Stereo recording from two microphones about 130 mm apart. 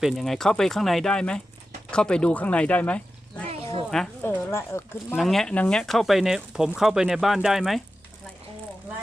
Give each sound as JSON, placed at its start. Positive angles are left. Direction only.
{"t": 0.0, "sound": "speech", "side_deg": 0}
{"t": 3.5, "sound": "a sound", "side_deg": -45}
{"t": 4.2, "sound": "speech", "side_deg": 15}
{"t": 5.1, "sound": "speech", "side_deg": 0}